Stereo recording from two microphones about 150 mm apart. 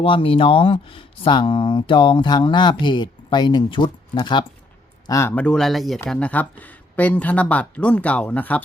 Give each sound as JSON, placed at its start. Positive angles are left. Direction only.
{"t": 0.0, "sound": "speech", "side_deg": 35}
{"t": 5.3, "sound": "speech", "side_deg": 5}